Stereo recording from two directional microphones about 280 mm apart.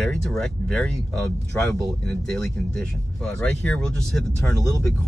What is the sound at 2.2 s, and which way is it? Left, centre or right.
Speech, centre.